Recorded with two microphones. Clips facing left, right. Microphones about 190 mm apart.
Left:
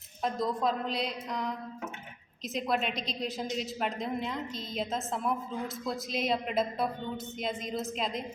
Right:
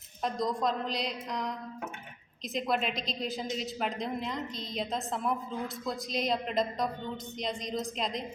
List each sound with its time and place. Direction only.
0.2 s a woman's voice: 5° left (ahead or behind)